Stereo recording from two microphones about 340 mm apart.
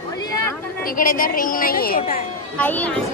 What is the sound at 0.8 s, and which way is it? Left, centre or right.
A woman's voice, left.